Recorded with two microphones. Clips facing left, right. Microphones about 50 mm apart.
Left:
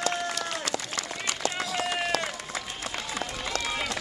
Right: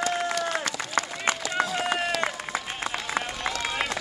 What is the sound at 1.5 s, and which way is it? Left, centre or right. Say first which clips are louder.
Run: right 4 dB; right.